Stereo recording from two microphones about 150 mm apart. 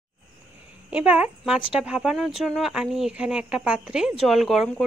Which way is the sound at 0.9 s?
10° right (ahead or behind).